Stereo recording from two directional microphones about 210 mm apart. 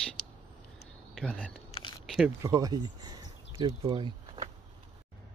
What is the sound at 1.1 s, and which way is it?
Speech, 5° left (ahead or behind).